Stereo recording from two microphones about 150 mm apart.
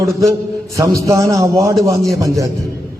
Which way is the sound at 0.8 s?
20° right (ahead or behind).